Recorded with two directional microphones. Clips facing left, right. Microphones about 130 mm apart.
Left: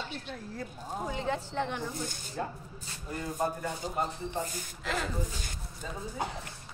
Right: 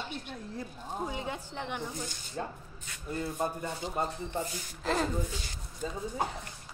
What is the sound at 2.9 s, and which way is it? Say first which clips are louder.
Speech: right 1 dB; 30° left (ahead or behind).